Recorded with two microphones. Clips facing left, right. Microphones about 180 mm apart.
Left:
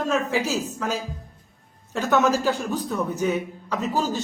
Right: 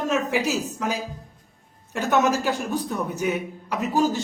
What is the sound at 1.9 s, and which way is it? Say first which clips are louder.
Speech: left 1 dB; 15° right (ahead or behind).